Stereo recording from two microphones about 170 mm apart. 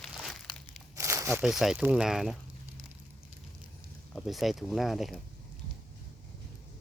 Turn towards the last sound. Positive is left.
turn(degrees=0)  # may be behind; listen again after turning